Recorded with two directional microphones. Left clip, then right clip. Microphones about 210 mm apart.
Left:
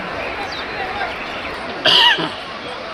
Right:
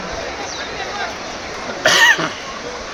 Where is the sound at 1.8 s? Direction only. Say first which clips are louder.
Right 1 dB; 30° right (ahead or behind).